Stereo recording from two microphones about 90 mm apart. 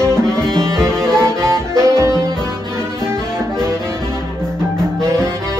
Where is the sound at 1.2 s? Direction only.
30° right (ahead or behind).